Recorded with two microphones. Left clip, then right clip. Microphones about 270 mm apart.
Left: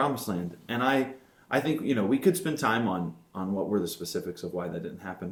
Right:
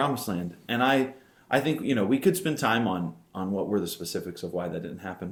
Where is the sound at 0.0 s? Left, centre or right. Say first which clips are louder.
Right 1 dB; centre.